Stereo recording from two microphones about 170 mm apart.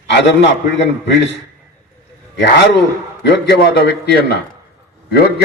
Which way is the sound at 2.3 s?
90° left.